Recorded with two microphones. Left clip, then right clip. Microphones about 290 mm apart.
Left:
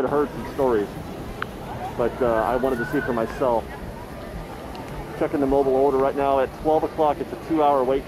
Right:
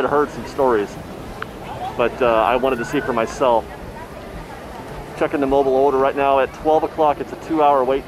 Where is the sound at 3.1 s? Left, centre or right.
Centre.